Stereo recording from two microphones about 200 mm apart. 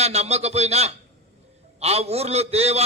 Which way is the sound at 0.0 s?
30° right (ahead or behind).